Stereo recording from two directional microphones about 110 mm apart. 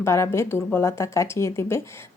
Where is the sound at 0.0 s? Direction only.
25° left (ahead or behind).